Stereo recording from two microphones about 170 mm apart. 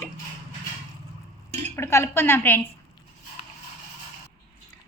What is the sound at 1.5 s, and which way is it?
Dishes, 40° right (ahead or behind).